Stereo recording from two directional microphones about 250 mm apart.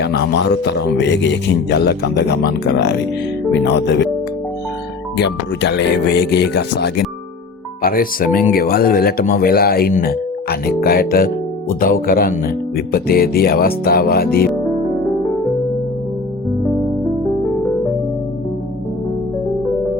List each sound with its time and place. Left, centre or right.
0.0 s speech: left
5.1 s speech: left